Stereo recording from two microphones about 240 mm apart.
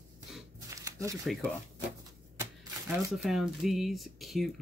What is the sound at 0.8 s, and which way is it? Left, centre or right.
Shuffling cards, centre.